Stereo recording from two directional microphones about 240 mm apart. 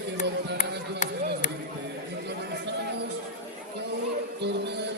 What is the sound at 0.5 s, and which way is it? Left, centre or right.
Speech, left.